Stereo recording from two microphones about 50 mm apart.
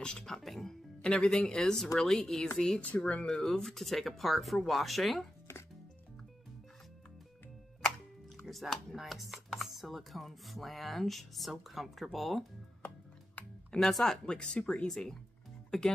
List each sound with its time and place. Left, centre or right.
0.0 s music: centre
0.4 s speech: centre
1.0 s speech: centre
2.9 s speech: left
3.3 s speech: centre
8.5 s speech: centre
13.7 s speech: centre